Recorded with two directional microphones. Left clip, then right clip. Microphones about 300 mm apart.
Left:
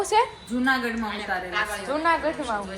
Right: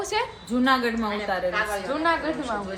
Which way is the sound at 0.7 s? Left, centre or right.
Right.